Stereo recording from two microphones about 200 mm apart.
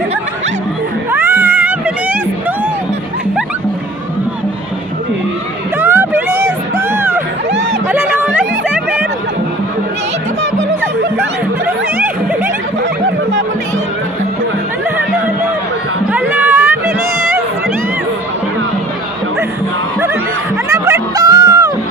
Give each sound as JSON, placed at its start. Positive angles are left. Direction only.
{"t": 1.1, "sound": "cat", "side_deg": -10}
{"t": 5.8, "sound": "music", "side_deg": -10}
{"t": 16.1, "sound": "a sound", "side_deg": -10}
{"t": 20.7, "sound": "music", "side_deg": -15}